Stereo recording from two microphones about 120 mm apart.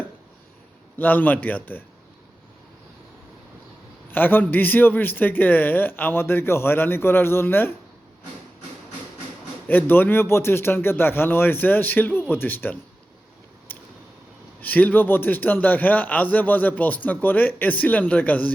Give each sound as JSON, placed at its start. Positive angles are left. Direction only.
{"t": 0.9, "sound": "a man's voice", "side_deg": 15}
{"t": 4.1, "sound": "a man's voice", "side_deg": 15}
{"t": 9.6, "sound": "a man's voice", "side_deg": 15}
{"t": 13.7, "sound": "a sound", "side_deg": 15}
{"t": 14.6, "sound": "a man's voice", "side_deg": 15}